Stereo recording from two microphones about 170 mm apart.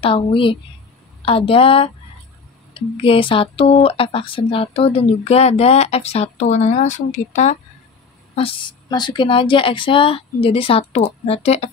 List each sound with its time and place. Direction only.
0.0 s speech: 30° left (ahead or behind)
8.4 s speech: 30° left (ahead or behind)